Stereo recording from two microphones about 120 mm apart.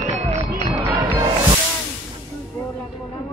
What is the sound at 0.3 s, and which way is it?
Music, 30° right (ahead or behind).